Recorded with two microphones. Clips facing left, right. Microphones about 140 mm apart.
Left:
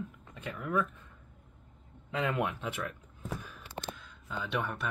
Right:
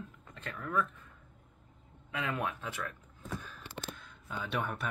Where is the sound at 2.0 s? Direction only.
25° left (ahead or behind).